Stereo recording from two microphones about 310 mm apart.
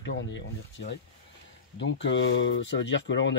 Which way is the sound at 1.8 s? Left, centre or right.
Left.